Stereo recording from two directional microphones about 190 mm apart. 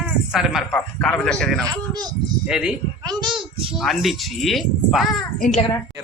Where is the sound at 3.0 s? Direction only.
20° right (ahead or behind).